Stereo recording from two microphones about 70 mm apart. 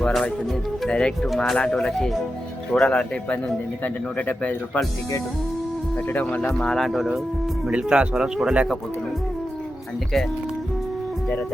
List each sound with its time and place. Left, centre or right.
0.0 s speech: centre
6.1 s speech: left
6.5 s speech: centre
7.7 s speech: centre